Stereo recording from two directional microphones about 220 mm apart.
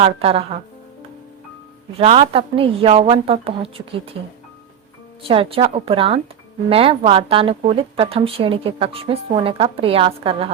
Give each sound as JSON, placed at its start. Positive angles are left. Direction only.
{"t": 0.0, "sound": "speech", "side_deg": -25}
{"t": 2.0, "sound": "speech", "side_deg": -25}
{"t": 5.3, "sound": "speech", "side_deg": -25}